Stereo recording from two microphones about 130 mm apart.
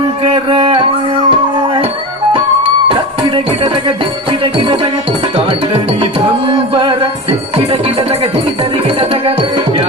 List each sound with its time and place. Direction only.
0.2 s a sound: 45° right (ahead or behind)
1.3 s music: 45° right (ahead or behind)
2.9 s music: 45° right (ahead or behind)
6.0 s music: 40° right (ahead or behind)